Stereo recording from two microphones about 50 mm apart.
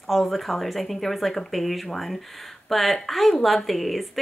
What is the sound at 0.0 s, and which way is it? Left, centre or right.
A woman's voice, centre.